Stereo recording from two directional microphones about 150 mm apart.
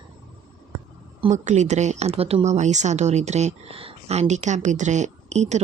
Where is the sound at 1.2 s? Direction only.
50° right (ahead or behind).